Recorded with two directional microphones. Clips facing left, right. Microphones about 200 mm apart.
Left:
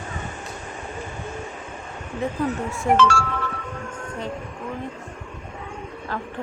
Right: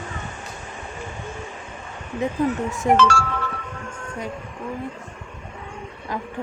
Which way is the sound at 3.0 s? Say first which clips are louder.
Even; 40° right (ahead or behind).